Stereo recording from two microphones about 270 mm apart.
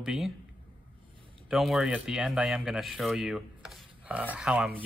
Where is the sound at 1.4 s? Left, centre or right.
Centre.